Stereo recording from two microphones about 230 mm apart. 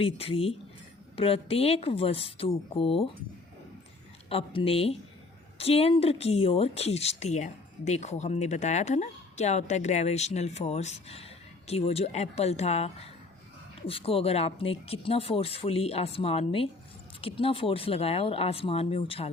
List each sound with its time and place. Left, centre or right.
0.0 s speech: left
4.3 s speech: left